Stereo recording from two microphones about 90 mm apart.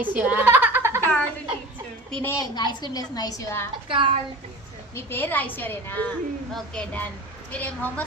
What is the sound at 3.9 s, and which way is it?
Speech, 75° right (ahead or behind).